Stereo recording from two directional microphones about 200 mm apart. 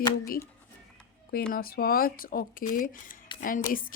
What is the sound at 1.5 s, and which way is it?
Speech, 50° left (ahead or behind).